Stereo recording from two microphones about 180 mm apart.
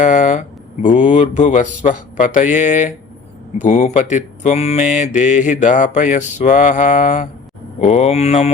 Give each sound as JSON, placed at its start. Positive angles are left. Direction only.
{"t": 0.0, "sound": "speech", "side_deg": 45}